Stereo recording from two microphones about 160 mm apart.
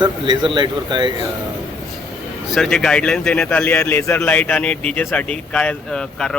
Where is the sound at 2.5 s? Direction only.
5° left (ahead or behind).